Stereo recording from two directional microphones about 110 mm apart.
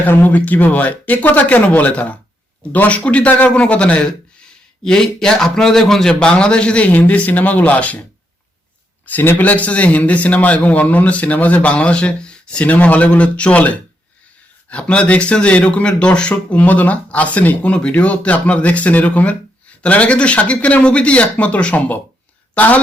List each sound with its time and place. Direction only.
0.0 s speech: 15° left (ahead or behind)
9.0 s speech: 15° left (ahead or behind)